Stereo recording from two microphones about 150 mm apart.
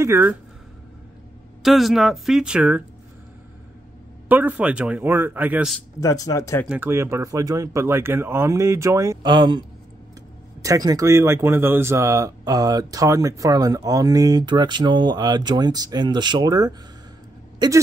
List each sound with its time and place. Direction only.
0.0 s speech: 15° right (ahead or behind)
1.6 s speech: centre (ahead or behind)
4.3 s speech: 10° right (ahead or behind)
5.9 s speech: 25° left (ahead or behind)
6.7 s speech: 15° right (ahead or behind)